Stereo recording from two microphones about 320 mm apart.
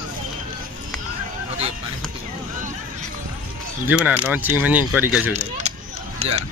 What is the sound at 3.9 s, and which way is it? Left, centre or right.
Speech, centre.